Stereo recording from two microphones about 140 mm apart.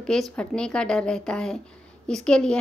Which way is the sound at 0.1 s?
5° left (ahead or behind).